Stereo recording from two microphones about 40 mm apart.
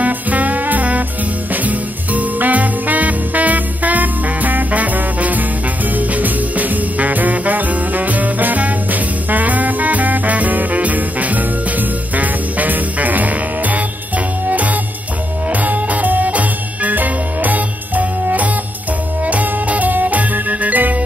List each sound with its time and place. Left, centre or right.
0.0 s music: right